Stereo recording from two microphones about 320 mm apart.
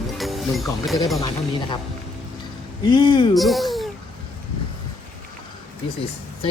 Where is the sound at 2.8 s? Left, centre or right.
Centre.